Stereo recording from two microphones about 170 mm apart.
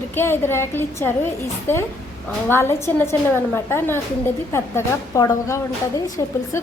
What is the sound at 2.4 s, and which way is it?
A woman's voice, 15° left (ahead or behind).